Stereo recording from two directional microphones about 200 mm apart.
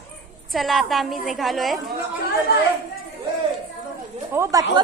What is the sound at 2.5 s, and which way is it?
Speech, 50° left (ahead or behind).